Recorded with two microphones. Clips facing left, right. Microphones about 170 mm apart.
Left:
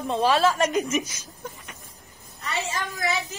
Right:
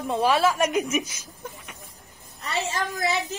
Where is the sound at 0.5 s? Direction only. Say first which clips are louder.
Even; centre (ahead or behind).